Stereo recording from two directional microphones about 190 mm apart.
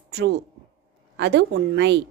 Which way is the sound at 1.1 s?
65° right (ahead or behind).